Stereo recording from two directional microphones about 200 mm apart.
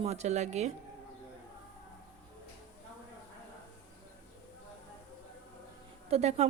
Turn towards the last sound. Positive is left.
turn(degrees=-30)  # may be behind; listen again after turning